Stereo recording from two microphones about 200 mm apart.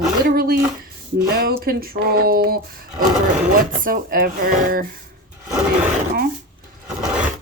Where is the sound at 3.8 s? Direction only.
45° right (ahead or behind).